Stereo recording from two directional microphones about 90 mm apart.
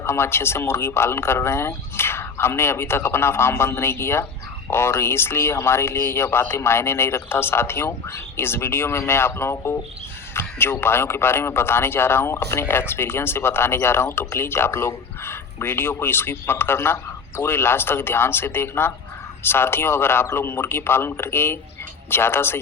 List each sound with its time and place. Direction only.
0.0 s a man's voice: 30° left (ahead or behind)